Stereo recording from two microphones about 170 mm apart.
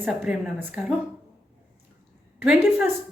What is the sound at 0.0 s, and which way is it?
Speech, 10° right (ahead or behind).